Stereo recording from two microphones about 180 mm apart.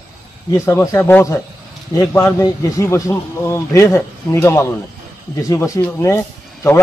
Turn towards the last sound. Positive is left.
turn(degrees=15)  # may be behind; listen again after turning